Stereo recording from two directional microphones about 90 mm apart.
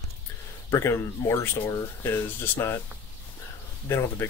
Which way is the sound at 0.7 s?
30° left (ahead or behind).